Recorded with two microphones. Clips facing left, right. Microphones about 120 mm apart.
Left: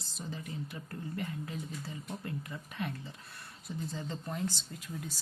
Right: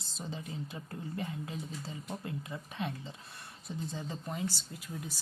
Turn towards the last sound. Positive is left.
turn(degrees=0)  # may be behind; listen again after turning